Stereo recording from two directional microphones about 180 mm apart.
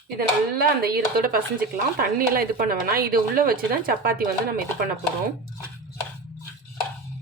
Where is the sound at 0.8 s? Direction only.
55° right (ahead or behind).